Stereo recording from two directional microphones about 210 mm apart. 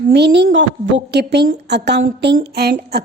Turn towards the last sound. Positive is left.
turn(degrees=-50)  # may be behind; listen again after turning